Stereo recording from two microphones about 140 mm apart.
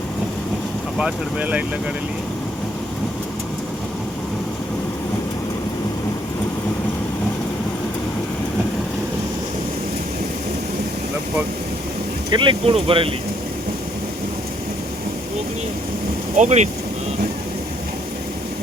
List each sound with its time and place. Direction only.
0.9 s speech: 5° right (ahead or behind)
12.3 s speech: 35° right (ahead or behind)
16.4 s speech: 55° right (ahead or behind)